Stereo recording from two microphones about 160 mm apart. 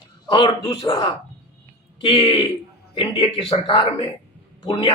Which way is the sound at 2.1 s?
35° left (ahead or behind).